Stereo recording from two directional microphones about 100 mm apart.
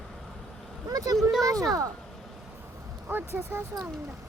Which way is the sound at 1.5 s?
35° right (ahead or behind).